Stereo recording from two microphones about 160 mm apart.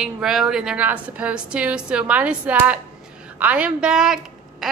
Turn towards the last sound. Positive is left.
turn(degrees=-5)  # may be behind; listen again after turning